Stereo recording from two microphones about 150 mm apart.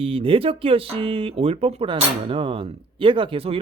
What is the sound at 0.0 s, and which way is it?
Speech, 40° right (ahead or behind).